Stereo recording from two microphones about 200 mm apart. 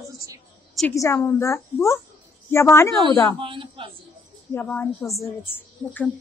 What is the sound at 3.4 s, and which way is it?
Speech, 25° right (ahead or behind).